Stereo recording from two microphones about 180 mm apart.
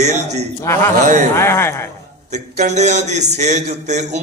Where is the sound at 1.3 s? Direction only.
15° left (ahead or behind).